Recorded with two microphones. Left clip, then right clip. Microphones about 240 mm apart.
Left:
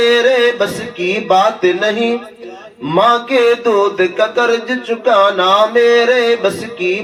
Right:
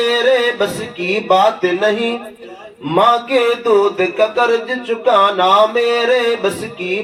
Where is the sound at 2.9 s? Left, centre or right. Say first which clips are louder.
Left 1 dB; left.